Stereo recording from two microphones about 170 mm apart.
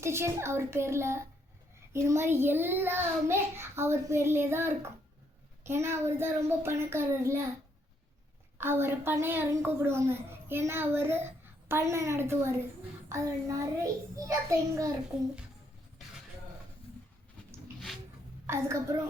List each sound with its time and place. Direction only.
0.0 s a child's voice: 15° right (ahead or behind)
8.5 s a child's voice: 15° right (ahead or behind)
18.4 s a child's voice: 15° right (ahead or behind)